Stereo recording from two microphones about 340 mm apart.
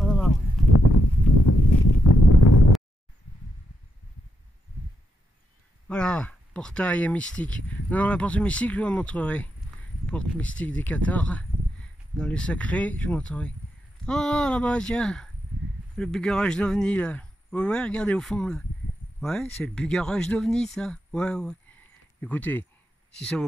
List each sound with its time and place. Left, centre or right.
0.0 s clip-clop: centre
0.7 s a sound: left
5.9 s speech: centre
19.6 s speech: centre